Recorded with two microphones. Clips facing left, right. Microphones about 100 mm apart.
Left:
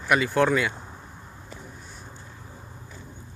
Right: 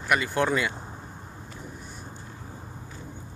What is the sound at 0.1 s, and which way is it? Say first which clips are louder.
Speech: left 3 dB; centre (ahead or behind).